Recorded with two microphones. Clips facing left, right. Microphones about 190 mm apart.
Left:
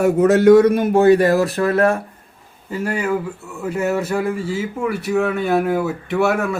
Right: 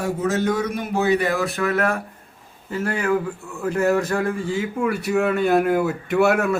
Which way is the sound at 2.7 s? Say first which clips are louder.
Left 1 dB; 10° left (ahead or behind).